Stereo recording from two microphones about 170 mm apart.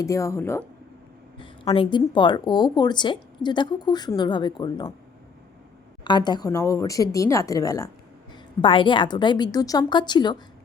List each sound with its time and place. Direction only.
0.0 s speech: 20° left (ahead or behind)
1.4 s speech: 30° left (ahead or behind)
6.1 s speech: 25° left (ahead or behind)